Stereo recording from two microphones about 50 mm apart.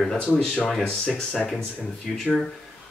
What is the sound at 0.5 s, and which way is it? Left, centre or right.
Speech, centre.